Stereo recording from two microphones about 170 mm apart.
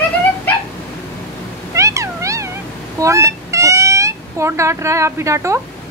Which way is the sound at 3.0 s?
15° right (ahead or behind).